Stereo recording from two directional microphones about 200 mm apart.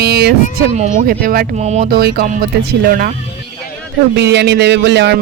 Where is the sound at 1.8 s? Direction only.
50° right (ahead or behind).